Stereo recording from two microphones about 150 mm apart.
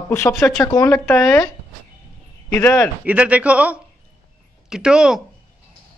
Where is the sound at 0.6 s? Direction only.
20° left (ahead or behind).